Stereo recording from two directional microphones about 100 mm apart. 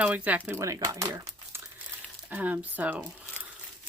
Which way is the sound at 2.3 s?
15° right (ahead or behind).